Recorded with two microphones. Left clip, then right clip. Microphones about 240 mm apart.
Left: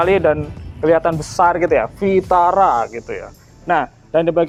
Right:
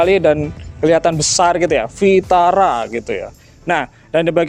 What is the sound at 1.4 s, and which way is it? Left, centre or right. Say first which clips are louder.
Speech: even; right.